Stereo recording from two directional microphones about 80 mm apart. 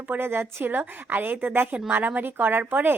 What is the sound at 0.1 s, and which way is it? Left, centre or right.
A woman's voice, right.